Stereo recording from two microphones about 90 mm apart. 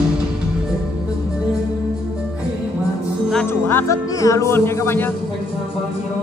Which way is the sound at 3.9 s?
35° left (ahead or behind).